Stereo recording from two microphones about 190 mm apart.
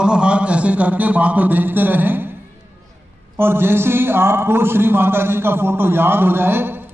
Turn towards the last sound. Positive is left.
turn(degrees=-10)  # may be behind; listen again after turning